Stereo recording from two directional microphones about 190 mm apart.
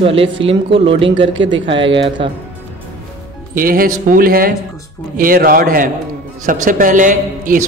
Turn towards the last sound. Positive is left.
turn(degrees=-45)  # may be behind; listen again after turning